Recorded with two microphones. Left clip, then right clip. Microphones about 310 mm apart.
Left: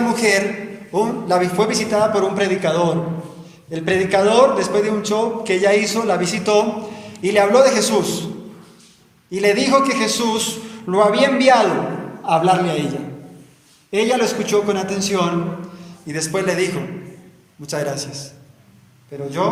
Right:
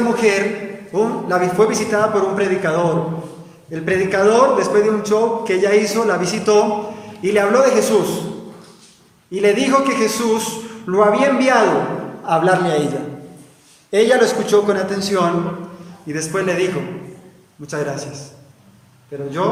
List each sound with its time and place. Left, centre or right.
0.2 s a man's voice: centre
9.3 s a man's voice: centre